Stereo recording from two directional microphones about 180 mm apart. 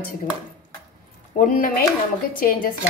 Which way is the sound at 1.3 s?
50° left (ahead or behind).